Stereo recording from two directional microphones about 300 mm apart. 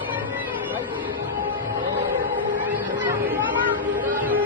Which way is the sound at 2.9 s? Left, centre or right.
Centre.